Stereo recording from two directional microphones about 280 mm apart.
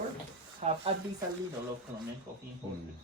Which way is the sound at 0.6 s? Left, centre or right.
Right.